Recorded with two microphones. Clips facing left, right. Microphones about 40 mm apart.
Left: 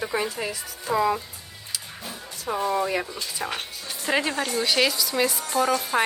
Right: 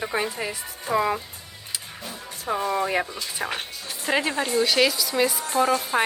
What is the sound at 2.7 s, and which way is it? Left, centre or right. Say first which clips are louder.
Speech: right 1 dB; right.